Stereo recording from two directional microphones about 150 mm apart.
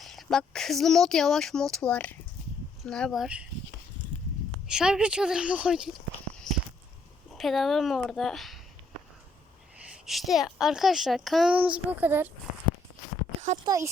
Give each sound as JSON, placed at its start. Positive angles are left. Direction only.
{"t": 0.0, "sound": "a woman's voice", "side_deg": 0}
{"t": 4.7, "sound": "a woman's voice", "side_deg": -5}
{"t": 6.5, "sound": "a sound", "side_deg": 0}
{"t": 7.3, "sound": "a woman's voice", "side_deg": 0}
{"t": 9.9, "sound": "a woman's voice", "side_deg": 0}
{"t": 13.7, "sound": "speech", "side_deg": -20}